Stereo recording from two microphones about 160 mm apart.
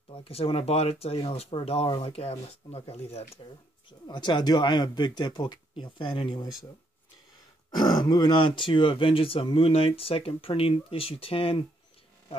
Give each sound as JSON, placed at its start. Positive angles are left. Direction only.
{"t": 0.1, "sound": "speech", "side_deg": 35}
{"t": 4.1, "sound": "speech", "side_deg": 30}
{"t": 7.7, "sound": "speech", "side_deg": 25}